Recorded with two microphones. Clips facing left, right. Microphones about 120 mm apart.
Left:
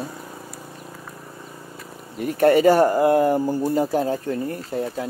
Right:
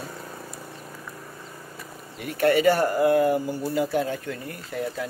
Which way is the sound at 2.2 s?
40° left (ahead or behind).